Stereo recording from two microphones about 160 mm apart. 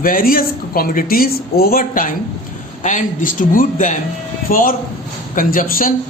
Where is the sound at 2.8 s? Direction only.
50° left (ahead or behind).